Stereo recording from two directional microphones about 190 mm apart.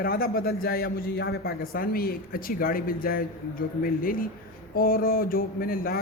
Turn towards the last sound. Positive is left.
turn(degrees=50)  # may be behind; listen again after turning